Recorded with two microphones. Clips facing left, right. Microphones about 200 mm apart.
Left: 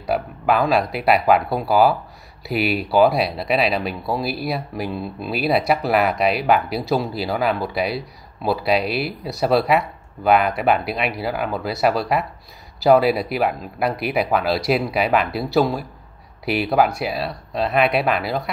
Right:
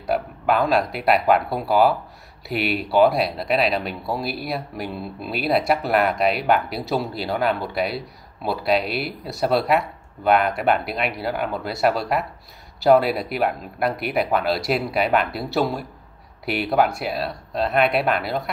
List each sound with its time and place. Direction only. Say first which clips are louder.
0.1 s speech: left 1 dB; centre (ahead or behind)